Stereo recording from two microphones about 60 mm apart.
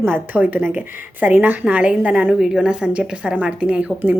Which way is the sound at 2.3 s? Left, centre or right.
Centre.